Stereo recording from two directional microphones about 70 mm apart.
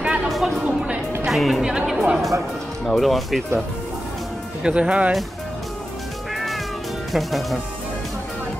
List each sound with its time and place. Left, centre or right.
0.0 s a sound: centre
0.3 s a sound: centre
0.7 s music: centre
1.2 s speech: centre
1.6 s speech: centre
4.6 s speech: centre
6.3 s cat: centre
7.1 s speech: centre